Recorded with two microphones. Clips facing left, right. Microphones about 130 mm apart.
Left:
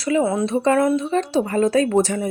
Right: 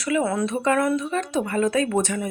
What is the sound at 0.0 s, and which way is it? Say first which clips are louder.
Speech: left 3 dB; 25° left (ahead or behind).